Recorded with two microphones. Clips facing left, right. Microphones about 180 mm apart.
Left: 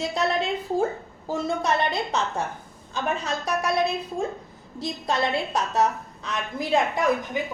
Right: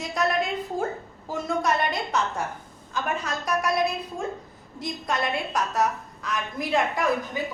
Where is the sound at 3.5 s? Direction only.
30° left (ahead or behind).